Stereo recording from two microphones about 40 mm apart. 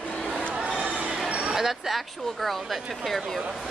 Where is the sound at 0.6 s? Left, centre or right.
Right.